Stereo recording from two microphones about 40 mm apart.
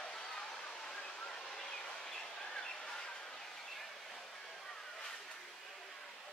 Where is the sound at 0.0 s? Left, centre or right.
Centre.